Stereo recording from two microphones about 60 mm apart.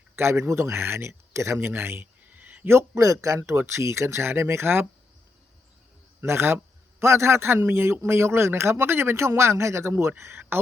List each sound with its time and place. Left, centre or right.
0.2 s speech: right
2.2 s a sound: right
2.6 s speech: right
3.0 s speech: right
6.2 s speech: right